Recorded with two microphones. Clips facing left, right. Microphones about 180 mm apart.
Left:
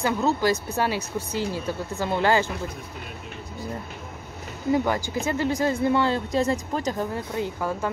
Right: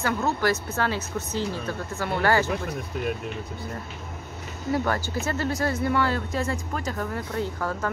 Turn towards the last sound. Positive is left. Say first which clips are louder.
# left 1 dB
turn(degrees=15)  # may be behind; listen again after turning